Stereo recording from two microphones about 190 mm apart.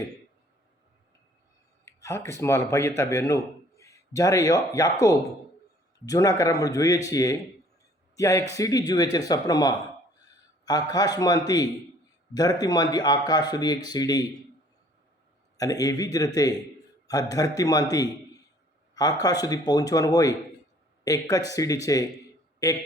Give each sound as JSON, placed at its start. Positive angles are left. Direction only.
{"t": 1.8, "sound": "a man's voice", "side_deg": 15}
{"t": 15.5, "sound": "a man's voice", "side_deg": 20}
{"t": 19.2, "sound": "a man's voice", "side_deg": 20}